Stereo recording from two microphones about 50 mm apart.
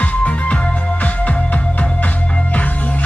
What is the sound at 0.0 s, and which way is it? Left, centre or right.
Music, left.